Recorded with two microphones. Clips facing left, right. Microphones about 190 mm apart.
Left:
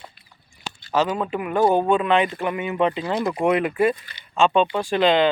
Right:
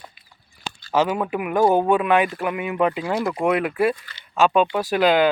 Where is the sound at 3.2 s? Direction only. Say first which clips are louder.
Even; 20° left (ahead or behind).